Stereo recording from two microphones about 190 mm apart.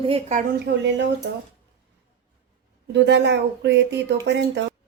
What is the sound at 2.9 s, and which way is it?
Speech, 65° right (ahead or behind).